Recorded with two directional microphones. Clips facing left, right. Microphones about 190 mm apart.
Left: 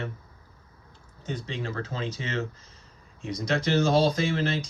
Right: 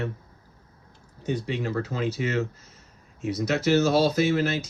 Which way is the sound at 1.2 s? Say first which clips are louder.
Right 5 dB; 10° right (ahead or behind).